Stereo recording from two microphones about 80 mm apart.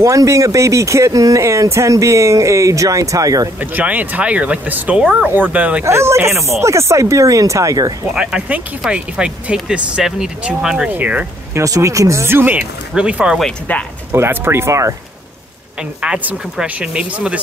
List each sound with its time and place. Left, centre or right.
0.0 s speech: right
3.5 s speech: right
5.9 s speech: right
8.1 s speech: centre
11.0 s speech: centre
11.5 s speech: right
12.5 s speech: centre
13.7 s speech: left
14.1 s speech: right
16.0 s speech: centre